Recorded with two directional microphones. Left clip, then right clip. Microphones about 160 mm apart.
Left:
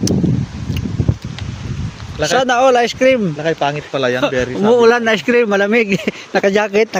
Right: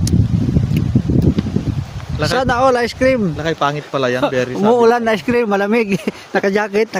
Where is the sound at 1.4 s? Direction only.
75° left (ahead or behind).